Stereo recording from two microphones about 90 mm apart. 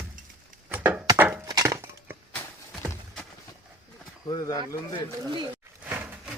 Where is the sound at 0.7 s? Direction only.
20° right (ahead or behind).